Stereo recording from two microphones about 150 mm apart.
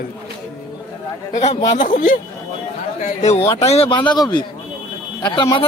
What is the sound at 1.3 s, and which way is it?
Speech, 45° left (ahead or behind).